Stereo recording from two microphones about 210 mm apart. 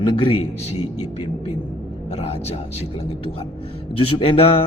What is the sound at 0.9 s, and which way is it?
Speech, 90° left.